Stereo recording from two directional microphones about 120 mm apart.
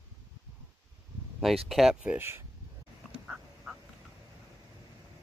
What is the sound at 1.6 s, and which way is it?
Speech, centre (ahead or behind).